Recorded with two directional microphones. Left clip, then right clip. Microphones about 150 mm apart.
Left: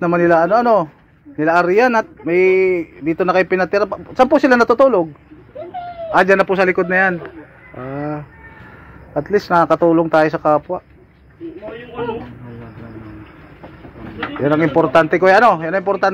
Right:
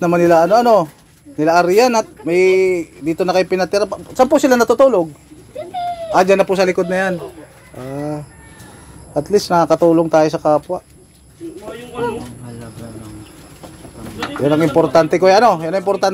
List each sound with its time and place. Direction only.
0.0 s speech: 20° right (ahead or behind); by 5.0 s 5° right (ahead or behind)
6.0 s speech: 20° right (ahead or behind)
7.7 s fowl: centre (ahead or behind)
8.0 s speech: 10° right (ahead or behind)
9.1 s speech: 25° right (ahead or behind)
14.4 s speech: 20° right (ahead or behind)